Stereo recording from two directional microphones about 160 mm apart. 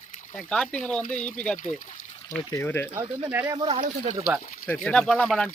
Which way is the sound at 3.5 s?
40° right (ahead or behind).